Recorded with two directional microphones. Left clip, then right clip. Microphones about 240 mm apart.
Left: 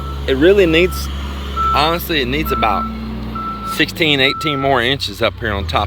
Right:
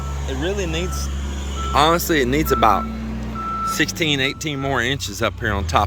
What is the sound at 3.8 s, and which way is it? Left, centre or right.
Speech, centre.